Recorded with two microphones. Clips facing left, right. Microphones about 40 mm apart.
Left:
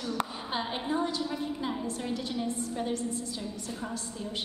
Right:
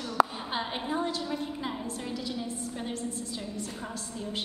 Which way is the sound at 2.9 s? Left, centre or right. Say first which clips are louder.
Left 3 dB; right.